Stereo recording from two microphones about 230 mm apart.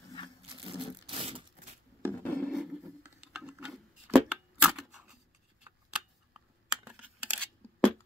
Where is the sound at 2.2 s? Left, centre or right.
Centre.